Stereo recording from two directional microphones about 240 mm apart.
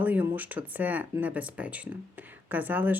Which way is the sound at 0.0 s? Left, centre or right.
Centre.